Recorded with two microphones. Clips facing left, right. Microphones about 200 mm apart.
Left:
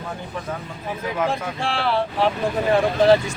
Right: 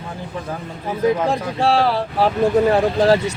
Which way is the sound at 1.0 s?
35° right (ahead or behind).